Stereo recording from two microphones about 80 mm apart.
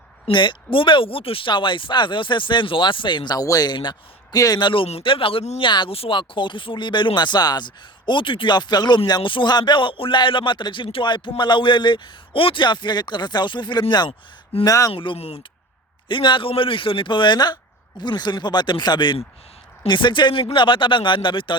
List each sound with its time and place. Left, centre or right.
0.3 s speech: left
3.3 s speech: left
3.7 s speech: left
4.4 s speech: left
4.6 s speech: left
14.6 s speech: left
14.9 s speech: left